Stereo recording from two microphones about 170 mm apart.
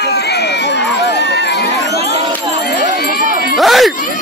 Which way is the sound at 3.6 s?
Centre (ahead or behind).